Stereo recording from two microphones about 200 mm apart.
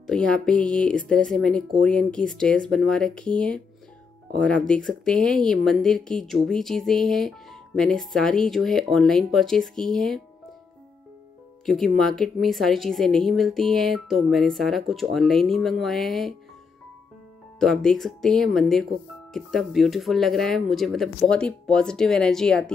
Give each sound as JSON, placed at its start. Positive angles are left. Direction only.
{"t": 0.0, "sound": "speech", "side_deg": 5}
{"t": 11.6, "sound": "speech", "side_deg": 0}
{"t": 17.6, "sound": "speech", "side_deg": 5}